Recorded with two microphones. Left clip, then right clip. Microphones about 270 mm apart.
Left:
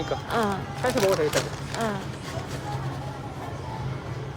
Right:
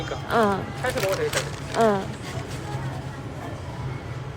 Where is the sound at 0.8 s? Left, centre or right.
Left.